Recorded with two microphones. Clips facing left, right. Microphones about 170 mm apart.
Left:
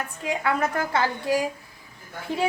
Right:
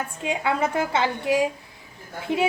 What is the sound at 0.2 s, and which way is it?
A woman's voice, 20° right (ahead or behind).